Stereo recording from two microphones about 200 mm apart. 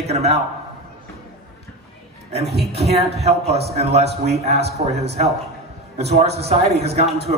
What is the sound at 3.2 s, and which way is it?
A man's voice, 30° right (ahead or behind).